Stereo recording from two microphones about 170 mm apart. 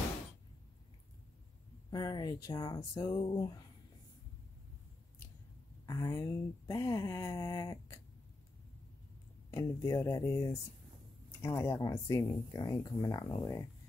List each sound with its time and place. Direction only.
1.9 s speech: 25° left (ahead or behind)
5.9 s speech: 20° left (ahead or behind)
9.5 s speech: 20° left (ahead or behind)